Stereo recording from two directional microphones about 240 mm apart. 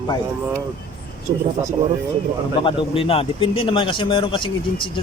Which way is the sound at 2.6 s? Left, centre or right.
Left.